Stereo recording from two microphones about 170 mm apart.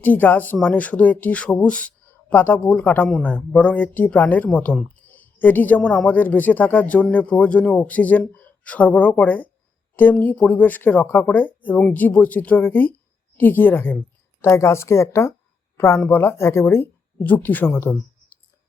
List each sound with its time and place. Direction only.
0.0 s speech: 10° left (ahead or behind)